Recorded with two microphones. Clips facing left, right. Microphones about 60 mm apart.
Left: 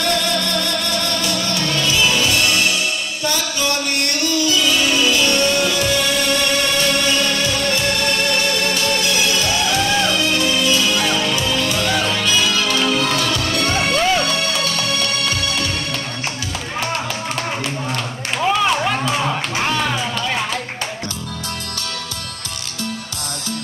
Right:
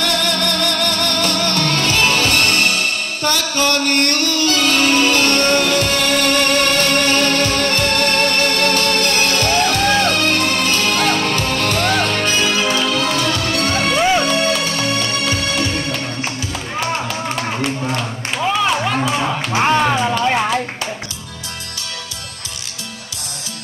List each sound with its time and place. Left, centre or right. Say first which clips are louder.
0.0 s music: right 1 dB; right
13.9 s music: right 5 dB; centre
17.4 s a sound: right 3 dB; centre
19.5 s music: right 5 dB; right